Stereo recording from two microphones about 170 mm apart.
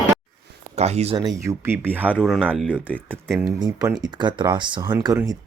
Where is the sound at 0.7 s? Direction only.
40° right (ahead or behind).